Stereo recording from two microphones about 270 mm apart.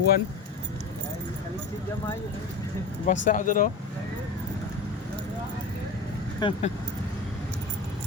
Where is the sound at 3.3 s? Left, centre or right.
Left.